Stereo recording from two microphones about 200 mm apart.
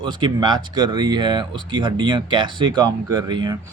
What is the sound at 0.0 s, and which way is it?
A man's voice, 20° right (ahead or behind).